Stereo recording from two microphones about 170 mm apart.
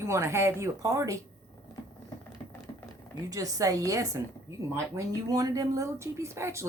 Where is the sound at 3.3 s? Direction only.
20° right (ahead or behind).